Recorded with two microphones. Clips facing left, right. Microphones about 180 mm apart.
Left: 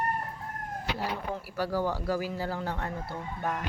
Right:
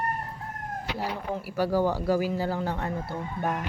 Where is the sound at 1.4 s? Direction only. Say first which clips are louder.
Right 6 dB; 15° right (ahead or behind).